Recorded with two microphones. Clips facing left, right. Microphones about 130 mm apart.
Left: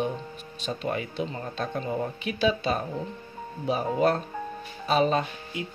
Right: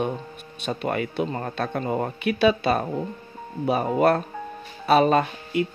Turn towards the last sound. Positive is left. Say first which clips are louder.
# right 8 dB
turn(degrees=-65)  # may be behind; listen again after turning